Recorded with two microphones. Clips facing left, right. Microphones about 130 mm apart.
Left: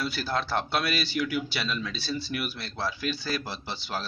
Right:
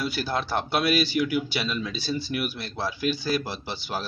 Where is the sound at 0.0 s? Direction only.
Centre (ahead or behind).